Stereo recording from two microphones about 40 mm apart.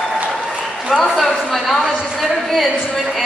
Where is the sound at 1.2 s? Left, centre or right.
Centre.